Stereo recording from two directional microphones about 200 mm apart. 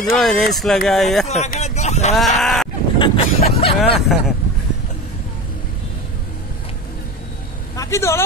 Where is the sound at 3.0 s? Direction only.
30° left (ahead or behind).